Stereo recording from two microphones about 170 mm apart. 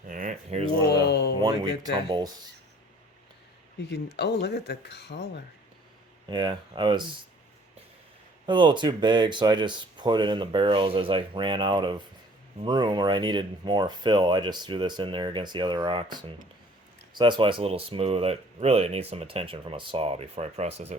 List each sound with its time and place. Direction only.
0.1 s a sound: 50° right (ahead or behind)
0.9 s a sound: 80° left
1.4 s speech: 25° right (ahead or behind)
3.9 s speech: 80° left
6.3 s speech: 25° right (ahead or behind)
8.4 s speech: 30° right (ahead or behind)